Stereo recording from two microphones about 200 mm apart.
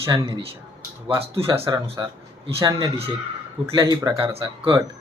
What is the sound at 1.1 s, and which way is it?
Speech, 30° right (ahead or behind).